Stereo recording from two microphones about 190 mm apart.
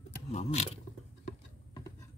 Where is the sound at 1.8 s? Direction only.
15° left (ahead or behind).